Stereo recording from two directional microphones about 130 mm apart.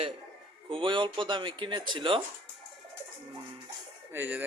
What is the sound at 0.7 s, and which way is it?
Speech, 40° right (ahead or behind).